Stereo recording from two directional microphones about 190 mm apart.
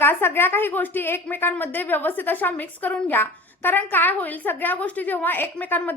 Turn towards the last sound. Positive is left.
turn(degrees=10)  # may be behind; listen again after turning